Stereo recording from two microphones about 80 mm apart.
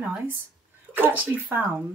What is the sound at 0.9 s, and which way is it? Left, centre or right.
Speech, right.